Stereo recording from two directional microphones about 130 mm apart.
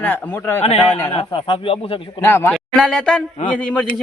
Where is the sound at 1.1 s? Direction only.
45° left (ahead or behind).